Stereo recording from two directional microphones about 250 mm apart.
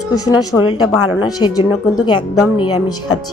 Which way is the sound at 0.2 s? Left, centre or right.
Centre.